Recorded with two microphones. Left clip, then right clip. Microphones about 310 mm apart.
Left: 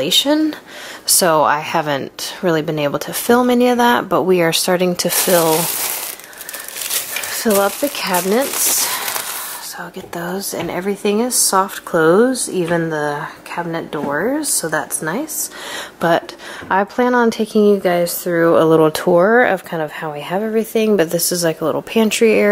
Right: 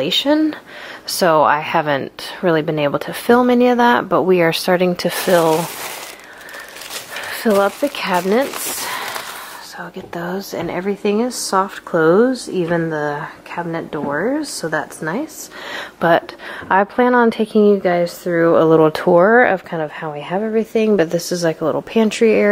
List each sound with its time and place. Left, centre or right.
0.0 s a woman's voice: centre
6.9 s a sound: centre
10.1 s a woman's voice: centre
11.6 s speech: centre
12.3 s a woman's voice: centre
21.5 s speech: centre
21.9 s a woman's voice: centre